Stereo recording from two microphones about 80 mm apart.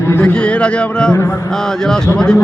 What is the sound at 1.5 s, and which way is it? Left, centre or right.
Speech, centre.